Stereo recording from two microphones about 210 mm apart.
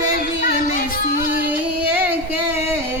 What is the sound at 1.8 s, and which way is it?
Child singing, 10° right (ahead or behind).